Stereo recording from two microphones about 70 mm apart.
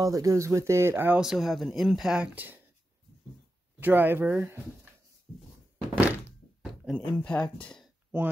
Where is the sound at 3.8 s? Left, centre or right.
Right.